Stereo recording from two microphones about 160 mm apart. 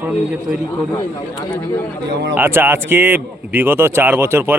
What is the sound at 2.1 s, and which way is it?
Speech, 90° right.